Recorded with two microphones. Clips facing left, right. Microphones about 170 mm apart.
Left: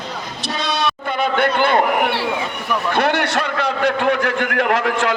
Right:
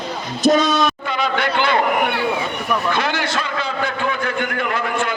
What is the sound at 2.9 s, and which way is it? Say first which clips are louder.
A man's voice: left 4 dB; 65° left (ahead or behind).